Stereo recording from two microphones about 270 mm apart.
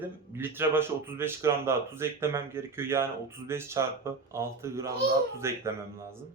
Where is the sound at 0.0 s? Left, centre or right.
Centre.